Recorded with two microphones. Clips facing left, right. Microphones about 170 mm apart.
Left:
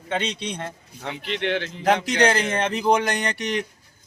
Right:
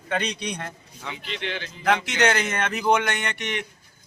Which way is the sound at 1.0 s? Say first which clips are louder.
Left 6 dB; 60° left (ahead or behind).